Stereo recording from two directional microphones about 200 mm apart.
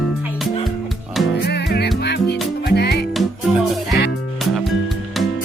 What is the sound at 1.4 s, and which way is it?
Music, 55° left (ahead or behind).